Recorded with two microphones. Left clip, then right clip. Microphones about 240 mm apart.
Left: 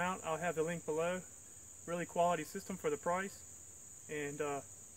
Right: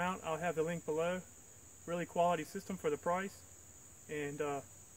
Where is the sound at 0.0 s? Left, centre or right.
Centre.